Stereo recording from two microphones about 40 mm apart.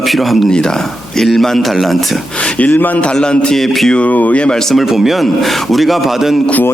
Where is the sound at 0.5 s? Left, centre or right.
Centre.